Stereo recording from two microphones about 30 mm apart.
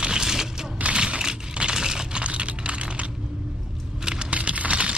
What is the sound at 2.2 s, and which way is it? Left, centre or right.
Computer keyboard, right.